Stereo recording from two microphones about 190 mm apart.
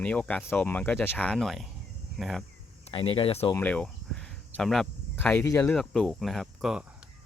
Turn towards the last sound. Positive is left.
turn(degrees=-5)  # may be behind; listen again after turning